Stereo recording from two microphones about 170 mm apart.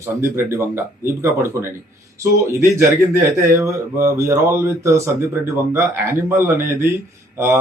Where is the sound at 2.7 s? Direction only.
15° right (ahead or behind).